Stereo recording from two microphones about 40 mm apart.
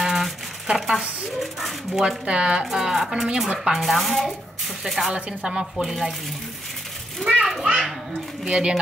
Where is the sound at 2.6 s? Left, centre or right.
Centre.